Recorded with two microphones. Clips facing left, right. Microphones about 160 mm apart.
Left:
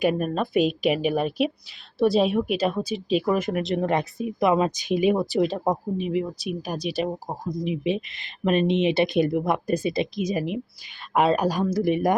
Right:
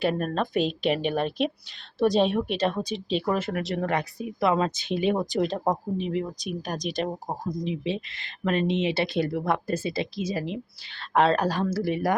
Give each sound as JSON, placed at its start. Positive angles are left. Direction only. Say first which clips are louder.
{"t": 0.0, "sound": "speech", "louder": "left 2 dB", "side_deg": 10}
{"t": 7.7, "sound": "speech", "louder": "left 4 dB", "side_deg": 15}